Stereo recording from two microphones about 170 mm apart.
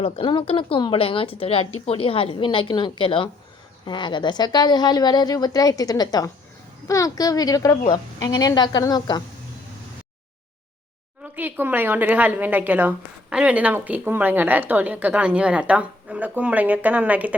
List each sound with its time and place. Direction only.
0.0 s a woman's voice: 30° left (ahead or behind)
11.2 s speech: 10° right (ahead or behind)